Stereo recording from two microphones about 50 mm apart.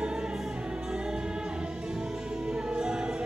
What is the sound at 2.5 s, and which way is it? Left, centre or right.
Music, centre.